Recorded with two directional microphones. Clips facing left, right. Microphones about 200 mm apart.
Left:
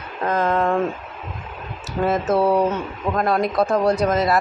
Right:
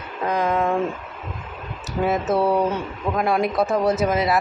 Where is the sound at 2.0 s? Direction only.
Centre (ahead or behind).